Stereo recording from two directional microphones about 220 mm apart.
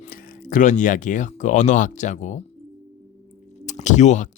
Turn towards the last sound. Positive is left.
turn(degrees=35)  # may be behind; listen again after turning